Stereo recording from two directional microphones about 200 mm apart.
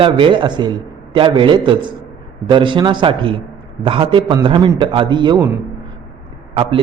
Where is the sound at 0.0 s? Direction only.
25° right (ahead or behind).